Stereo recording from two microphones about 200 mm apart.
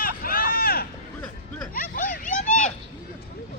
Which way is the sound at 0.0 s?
45° left (ahead or behind).